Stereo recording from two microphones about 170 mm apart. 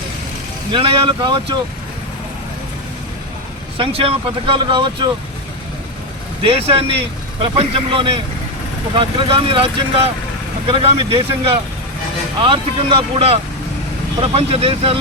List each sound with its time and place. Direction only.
0.7 s speech: 30° right (ahead or behind)
3.8 s speech: 35° right (ahead or behind)
6.4 s speech: 35° right (ahead or behind)